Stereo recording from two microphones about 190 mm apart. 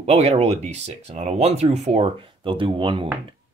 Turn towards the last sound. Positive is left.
turn(degrees=-25)  # may be behind; listen again after turning